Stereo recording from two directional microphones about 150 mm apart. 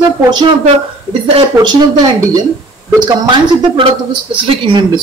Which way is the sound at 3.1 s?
30° right (ahead or behind).